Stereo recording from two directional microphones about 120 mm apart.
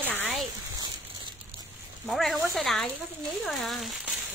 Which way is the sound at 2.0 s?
Centre (ahead or behind).